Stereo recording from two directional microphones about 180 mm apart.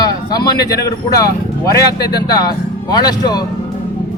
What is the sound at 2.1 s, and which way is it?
Speech, 20° left (ahead or behind).